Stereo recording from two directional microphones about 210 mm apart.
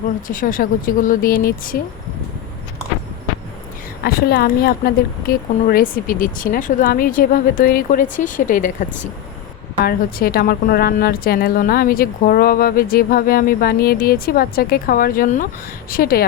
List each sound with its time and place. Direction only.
0.3 s speech: 40° left (ahead or behind)
4.0 s a woman's voice: 45° left (ahead or behind)